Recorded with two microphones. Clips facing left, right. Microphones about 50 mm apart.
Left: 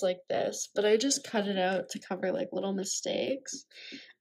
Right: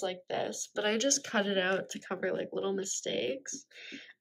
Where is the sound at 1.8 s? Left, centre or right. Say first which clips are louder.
Left 2 dB; centre.